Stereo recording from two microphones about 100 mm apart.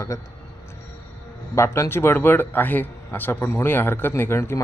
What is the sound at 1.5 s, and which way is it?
A man's voice, 30° left (ahead or behind).